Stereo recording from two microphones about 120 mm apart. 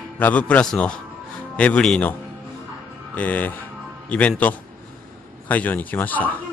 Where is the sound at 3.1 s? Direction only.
15° left (ahead or behind).